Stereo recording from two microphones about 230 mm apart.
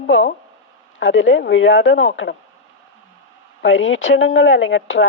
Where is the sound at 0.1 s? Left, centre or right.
Left.